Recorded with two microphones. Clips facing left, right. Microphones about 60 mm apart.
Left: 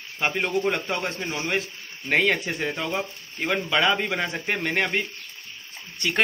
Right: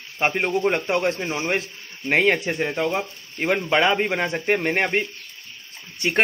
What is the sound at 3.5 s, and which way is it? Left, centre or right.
Speech, right.